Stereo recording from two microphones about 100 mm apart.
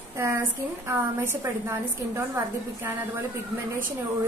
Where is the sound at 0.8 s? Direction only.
25° right (ahead or behind).